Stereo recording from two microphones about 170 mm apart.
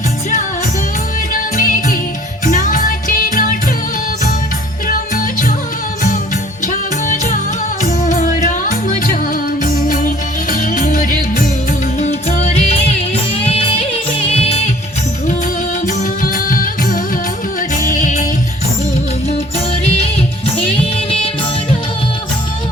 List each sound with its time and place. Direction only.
1.3 s music: 55° left (ahead or behind)
4.9 s music: 50° left (ahead or behind)
6.7 s music: 50° left (ahead or behind)
11.9 s music: 40° left (ahead or behind)
15.9 s music: 55° left (ahead or behind)
20.6 s music: 35° left (ahead or behind)